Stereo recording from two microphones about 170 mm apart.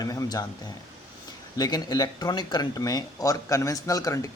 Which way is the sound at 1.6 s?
25° left (ahead or behind).